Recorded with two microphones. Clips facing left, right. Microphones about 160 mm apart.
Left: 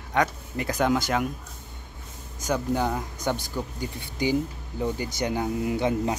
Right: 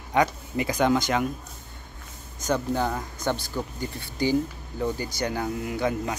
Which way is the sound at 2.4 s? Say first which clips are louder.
Even; 10° left (ahead or behind).